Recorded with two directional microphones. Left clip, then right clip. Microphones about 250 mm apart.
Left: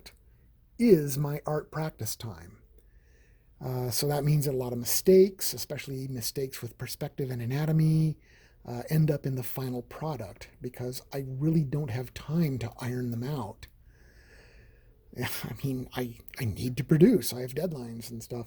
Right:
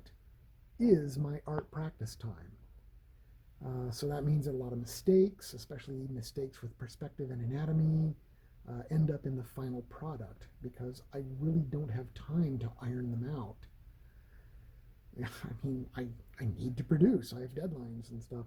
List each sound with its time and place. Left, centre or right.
0.8 s speech: centre
3.6 s speech: left
15.1 s speech: left